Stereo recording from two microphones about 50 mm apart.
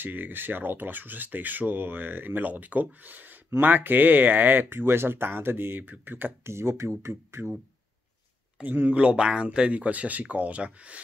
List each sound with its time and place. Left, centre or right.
0.0 s speech: right
6.4 s speech: right
8.9 s speech: right